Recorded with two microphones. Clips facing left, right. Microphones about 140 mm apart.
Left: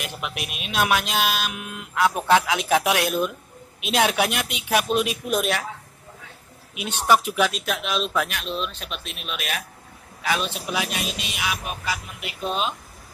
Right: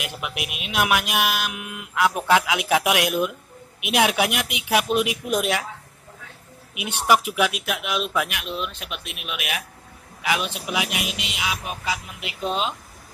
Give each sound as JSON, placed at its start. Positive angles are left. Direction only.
{"t": 0.2, "sound": "speech", "side_deg": -15}
{"t": 6.7, "sound": "a woman's voice", "side_deg": -15}